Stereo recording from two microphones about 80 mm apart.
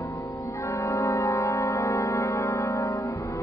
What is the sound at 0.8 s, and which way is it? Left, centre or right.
Music, left.